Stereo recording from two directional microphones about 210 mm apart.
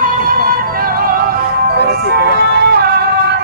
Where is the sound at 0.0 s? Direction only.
45° right (ahead or behind).